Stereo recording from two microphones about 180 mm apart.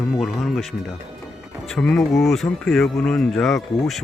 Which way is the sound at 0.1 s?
Centre (ahead or behind).